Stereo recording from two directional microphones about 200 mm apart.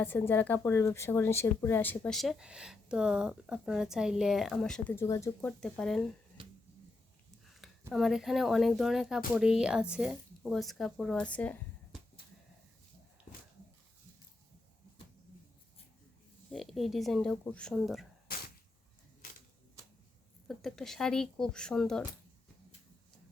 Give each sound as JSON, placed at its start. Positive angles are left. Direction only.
{"t": 0.0, "sound": "speech", "side_deg": 10}
{"t": 6.4, "sound": "finger snapping", "side_deg": -25}
{"t": 7.5, "sound": "speech", "side_deg": 0}
{"t": 16.5, "sound": "speech", "side_deg": 0}
{"t": 20.5, "sound": "speech", "side_deg": 0}